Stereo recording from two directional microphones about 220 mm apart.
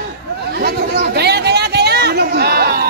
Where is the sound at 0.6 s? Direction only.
45° right (ahead or behind).